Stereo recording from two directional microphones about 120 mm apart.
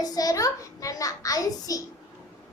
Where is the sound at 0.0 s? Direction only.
30° left (ahead or behind).